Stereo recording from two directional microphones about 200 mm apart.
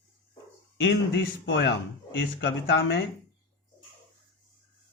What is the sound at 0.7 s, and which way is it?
Speech, 60° left (ahead or behind).